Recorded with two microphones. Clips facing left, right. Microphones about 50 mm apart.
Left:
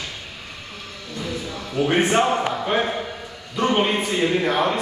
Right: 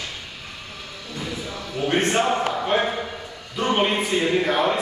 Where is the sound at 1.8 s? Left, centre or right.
Centre.